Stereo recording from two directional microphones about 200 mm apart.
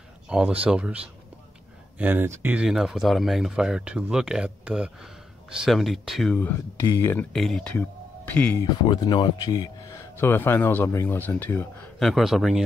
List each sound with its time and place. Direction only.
0.3 s speech: 5° right (ahead or behind)
8.8 s speech: 20° left (ahead or behind); by 12.6 s centre (ahead or behind)